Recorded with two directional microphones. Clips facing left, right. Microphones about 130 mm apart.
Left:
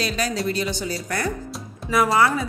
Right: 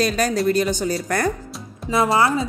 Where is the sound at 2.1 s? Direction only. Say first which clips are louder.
Right 1 dB; 25° right (ahead or behind).